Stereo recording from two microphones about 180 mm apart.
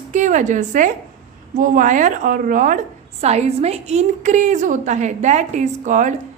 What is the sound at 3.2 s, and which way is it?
A woman's voice, 35° right (ahead or behind).